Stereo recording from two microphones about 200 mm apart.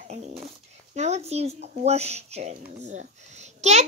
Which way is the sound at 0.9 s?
35° right (ahead or behind).